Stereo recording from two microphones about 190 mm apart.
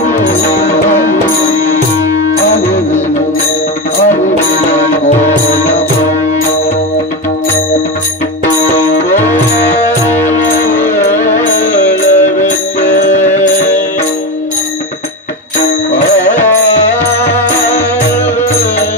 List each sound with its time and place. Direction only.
10.5 s music: 45° left (ahead or behind)